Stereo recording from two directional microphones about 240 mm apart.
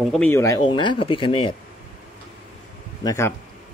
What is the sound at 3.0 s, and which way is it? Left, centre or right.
Speech, centre.